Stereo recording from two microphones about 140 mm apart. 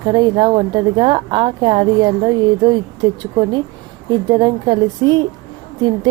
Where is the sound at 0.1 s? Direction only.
30° right (ahead or behind).